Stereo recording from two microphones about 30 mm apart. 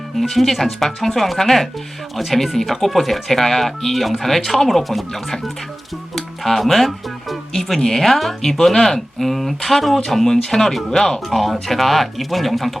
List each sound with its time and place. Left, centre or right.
0.2 s speech: centre
6.1 s music: centre
7.8 s speech: centre
10.9 s speech: centre
11.3 s speech: centre